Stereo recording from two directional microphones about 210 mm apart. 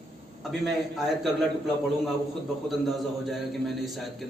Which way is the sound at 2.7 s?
Centre (ahead or behind).